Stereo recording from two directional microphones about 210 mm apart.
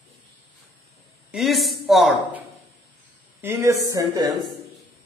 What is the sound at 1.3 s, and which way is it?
A woman's voice, centre (ahead or behind).